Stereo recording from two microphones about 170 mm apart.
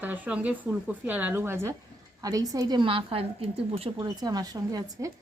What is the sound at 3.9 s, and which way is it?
Speech, 20° right (ahead or behind).